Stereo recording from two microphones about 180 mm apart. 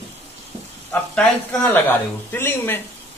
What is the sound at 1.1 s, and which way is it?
Speech, 5° left (ahead or behind).